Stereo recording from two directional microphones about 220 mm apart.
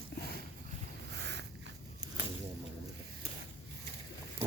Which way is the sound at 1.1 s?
50° right (ahead or behind).